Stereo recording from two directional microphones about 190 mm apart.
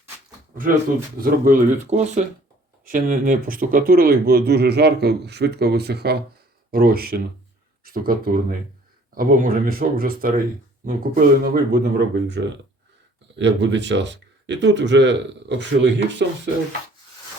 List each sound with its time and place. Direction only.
1.2 s speech: 45° right (ahead or behind); by 16.2 s 65° right (ahead or behind)